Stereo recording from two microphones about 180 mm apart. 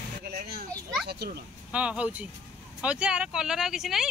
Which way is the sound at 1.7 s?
5° right (ahead or behind).